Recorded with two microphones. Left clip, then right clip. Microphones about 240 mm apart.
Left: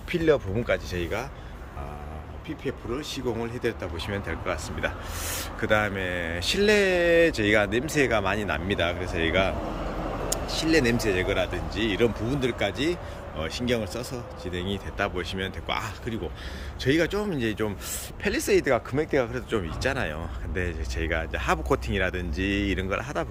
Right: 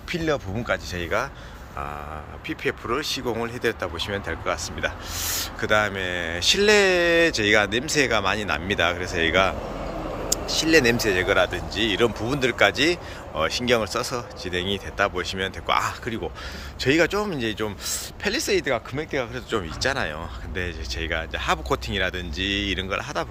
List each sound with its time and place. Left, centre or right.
0.1 s speech: centre
2.5 s speech: centre
10.6 s speech: centre